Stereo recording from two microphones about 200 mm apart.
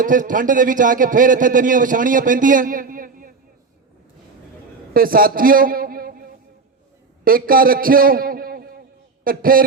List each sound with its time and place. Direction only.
0.0 s a man's voice: 40° right (ahead or behind)
4.9 s a man's voice: 45° right (ahead or behind)
7.3 s a man's voice: 45° right (ahead or behind)